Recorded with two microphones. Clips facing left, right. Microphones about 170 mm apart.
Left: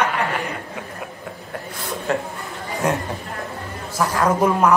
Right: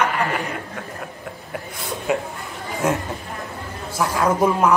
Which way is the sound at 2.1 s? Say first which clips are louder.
Right 1 dB; 10° right (ahead or behind).